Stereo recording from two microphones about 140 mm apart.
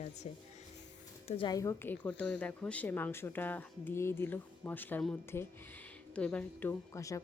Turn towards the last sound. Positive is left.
turn(degrees=25)  # may be behind; listen again after turning